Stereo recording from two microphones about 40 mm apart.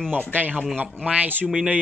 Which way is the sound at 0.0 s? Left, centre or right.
Left.